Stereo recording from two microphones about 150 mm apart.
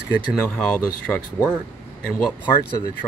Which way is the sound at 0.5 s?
5° left (ahead or behind).